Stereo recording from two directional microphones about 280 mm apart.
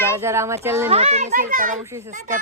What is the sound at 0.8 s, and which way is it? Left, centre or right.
Speech, right.